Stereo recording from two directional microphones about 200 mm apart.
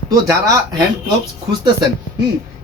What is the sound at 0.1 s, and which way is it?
Speech, 15° right (ahead or behind).